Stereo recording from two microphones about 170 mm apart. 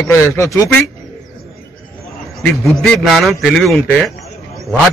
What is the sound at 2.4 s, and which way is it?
A man's voice, centre (ahead or behind).